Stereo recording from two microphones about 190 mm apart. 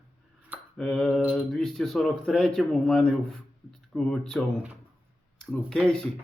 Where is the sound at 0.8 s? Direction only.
Centre (ahead or behind).